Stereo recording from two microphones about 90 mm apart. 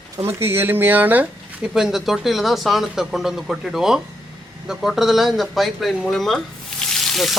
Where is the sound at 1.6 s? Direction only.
5° right (ahead or behind).